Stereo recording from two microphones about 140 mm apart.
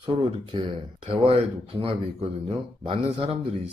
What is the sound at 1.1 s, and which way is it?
A man's voice, 45° right (ahead or behind).